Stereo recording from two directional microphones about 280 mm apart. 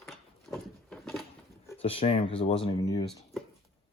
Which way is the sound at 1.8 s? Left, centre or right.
Centre.